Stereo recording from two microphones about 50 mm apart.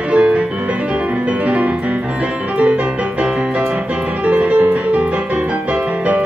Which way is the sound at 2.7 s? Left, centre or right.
Right.